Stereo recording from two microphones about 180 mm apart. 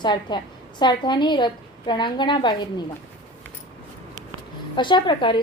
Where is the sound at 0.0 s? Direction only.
25° left (ahead or behind).